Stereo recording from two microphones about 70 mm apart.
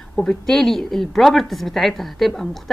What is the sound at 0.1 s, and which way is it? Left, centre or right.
A woman's voice, centre.